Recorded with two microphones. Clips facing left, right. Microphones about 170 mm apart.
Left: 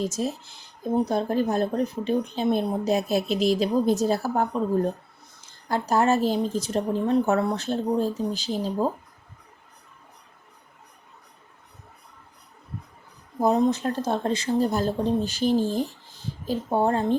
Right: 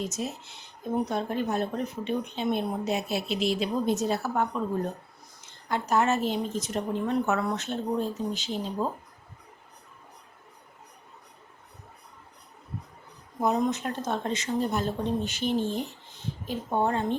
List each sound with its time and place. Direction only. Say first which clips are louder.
0.0 s speech: left 5 dB; 35° left (ahead or behind)
13.4 s speech: left 5 dB; 30° left (ahead or behind)